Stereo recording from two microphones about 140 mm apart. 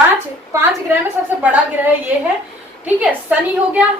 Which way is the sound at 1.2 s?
10° right (ahead or behind).